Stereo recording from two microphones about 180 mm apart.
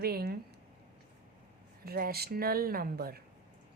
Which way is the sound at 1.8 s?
60° right (ahead or behind).